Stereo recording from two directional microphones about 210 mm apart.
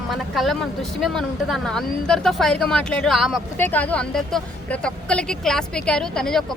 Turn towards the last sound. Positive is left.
turn(degrees=0)  # may be behind; listen again after turning